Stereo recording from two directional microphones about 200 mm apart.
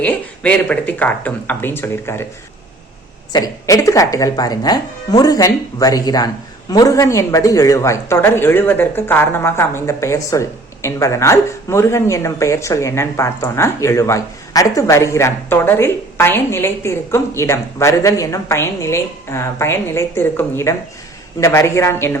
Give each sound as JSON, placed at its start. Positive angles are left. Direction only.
{"t": 0.0, "sound": "speech", "side_deg": 5}
{"t": 3.3, "sound": "speech", "side_deg": 15}